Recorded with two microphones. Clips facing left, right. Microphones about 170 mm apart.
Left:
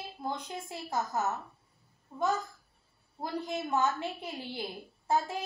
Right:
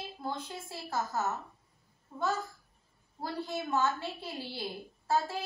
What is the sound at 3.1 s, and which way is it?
A woman's voice, 15° left (ahead or behind).